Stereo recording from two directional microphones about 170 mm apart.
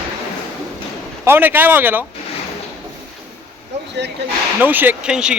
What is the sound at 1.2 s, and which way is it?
Speech, 10° right (ahead or behind).